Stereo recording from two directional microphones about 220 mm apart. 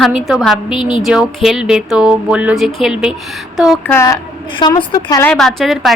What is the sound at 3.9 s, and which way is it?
A woman's voice, 15° left (ahead or behind).